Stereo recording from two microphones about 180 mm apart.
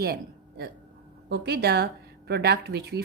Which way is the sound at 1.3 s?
65° right (ahead or behind).